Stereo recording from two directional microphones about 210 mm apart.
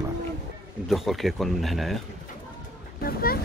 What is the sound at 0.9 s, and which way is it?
Speech, centre (ahead or behind).